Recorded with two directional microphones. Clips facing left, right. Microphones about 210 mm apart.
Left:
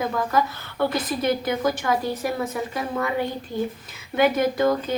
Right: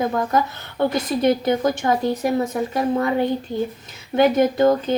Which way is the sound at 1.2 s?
30° right (ahead or behind).